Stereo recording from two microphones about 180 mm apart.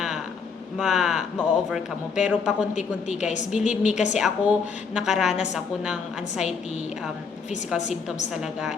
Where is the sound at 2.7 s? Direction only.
40° left (ahead or behind).